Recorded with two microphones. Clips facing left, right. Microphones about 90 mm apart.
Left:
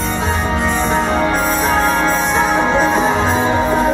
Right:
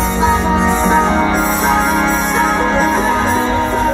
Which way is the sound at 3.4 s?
15° left (ahead or behind).